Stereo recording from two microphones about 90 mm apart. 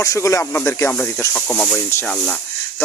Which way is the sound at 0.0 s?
35° left (ahead or behind).